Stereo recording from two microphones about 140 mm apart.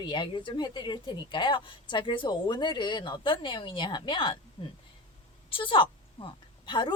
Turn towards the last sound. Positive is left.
turn(degrees=35)  # may be behind; listen again after turning